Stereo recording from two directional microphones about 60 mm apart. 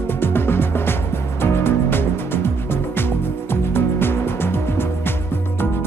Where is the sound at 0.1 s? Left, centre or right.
Left.